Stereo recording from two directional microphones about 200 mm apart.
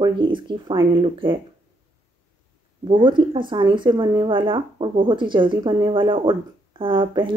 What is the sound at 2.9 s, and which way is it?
Speech, 25° right (ahead or behind).